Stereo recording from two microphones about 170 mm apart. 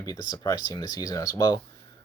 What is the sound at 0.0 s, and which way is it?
Speech, 20° left (ahead or behind).